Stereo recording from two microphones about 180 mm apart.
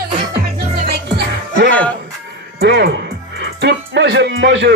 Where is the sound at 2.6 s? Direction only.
65° right (ahead or behind).